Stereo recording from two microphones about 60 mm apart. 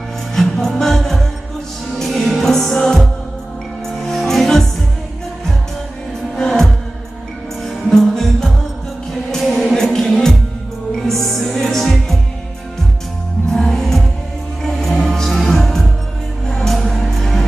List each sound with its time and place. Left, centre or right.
0.3 s music: centre
6.3 s music: centre
7.9 s music: centre
13.5 s music: centre